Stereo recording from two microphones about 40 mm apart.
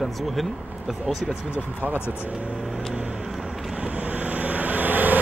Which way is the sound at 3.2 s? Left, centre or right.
Centre.